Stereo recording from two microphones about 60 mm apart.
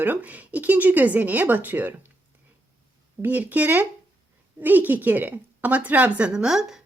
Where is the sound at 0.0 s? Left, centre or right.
Right.